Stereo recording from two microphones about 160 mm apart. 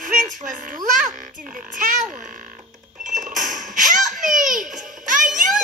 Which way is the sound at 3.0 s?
50° right (ahead or behind).